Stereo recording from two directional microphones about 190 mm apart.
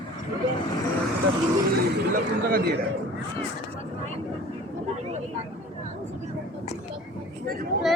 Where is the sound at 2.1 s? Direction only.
55° right (ahead or behind).